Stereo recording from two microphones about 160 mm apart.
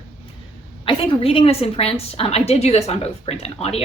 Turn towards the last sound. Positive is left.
turn(degrees=40)  # may be behind; listen again after turning